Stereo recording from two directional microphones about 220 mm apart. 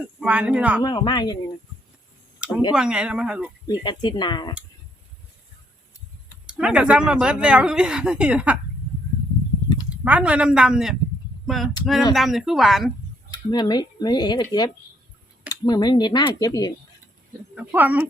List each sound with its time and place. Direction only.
0.2 s speech: 5° right (ahead or behind)
0.8 s speech: 20° left (ahead or behind)
2.4 s a sound: 5° right (ahead or behind)
2.7 s speech: 5° right (ahead or behind)
3.7 s speech: 20° left (ahead or behind)
6.5 s speech: 5° right (ahead or behind)
9.9 s speech: 5° right (ahead or behind)
13.3 s speech: 20° left (ahead or behind)
17.5 s speech: 5° right (ahead or behind)